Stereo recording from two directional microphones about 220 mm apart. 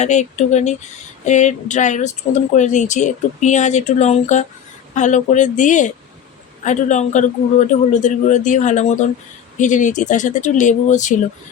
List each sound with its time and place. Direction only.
0.0 s speech: 30° left (ahead or behind)